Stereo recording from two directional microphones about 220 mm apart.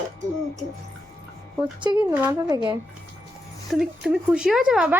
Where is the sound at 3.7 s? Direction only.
Centre (ahead or behind).